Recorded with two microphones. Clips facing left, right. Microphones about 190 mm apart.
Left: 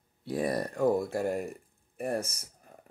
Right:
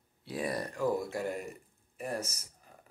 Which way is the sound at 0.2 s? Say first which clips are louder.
Left 5 dB; 50° left (ahead or behind).